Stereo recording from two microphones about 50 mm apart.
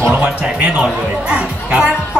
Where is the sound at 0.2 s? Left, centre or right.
Right.